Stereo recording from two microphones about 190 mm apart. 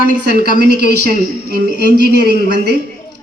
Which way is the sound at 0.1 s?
45° left (ahead or behind).